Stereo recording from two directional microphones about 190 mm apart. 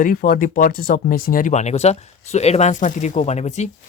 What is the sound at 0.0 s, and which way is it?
Speech, 50° left (ahead or behind).